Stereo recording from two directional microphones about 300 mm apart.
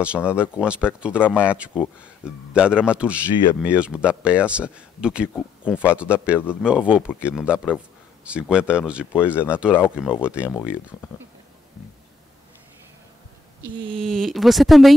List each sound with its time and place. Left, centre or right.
0.3 s speech: centre
9.2 s speech: centre
13.6 s a sound: centre
13.9 s speech: centre